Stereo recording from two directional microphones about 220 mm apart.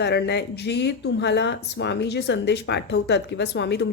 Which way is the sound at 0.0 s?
50° left (ahead or behind).